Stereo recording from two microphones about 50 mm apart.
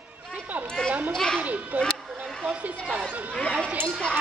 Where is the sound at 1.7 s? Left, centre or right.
Right.